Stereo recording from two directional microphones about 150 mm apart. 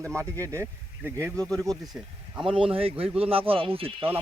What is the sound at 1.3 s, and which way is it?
Speech, 5° left (ahead or behind).